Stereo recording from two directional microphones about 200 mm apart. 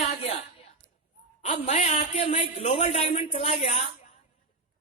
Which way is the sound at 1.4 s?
35° left (ahead or behind).